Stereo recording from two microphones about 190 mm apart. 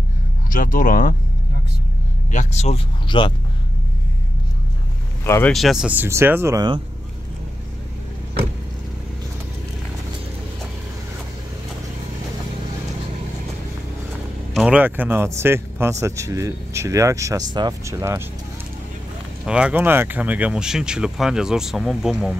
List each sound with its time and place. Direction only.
0.5 s speech: 45° left (ahead or behind)
2.3 s speech: 35° left (ahead or behind)
5.2 s speech: 15° left (ahead or behind)
5.5 s speech: centre (ahead or behind); by 6.8 s 20° right (ahead or behind)
14.5 s speech: 5° right (ahead or behind)
19.4 s speech: 5° right (ahead or behind)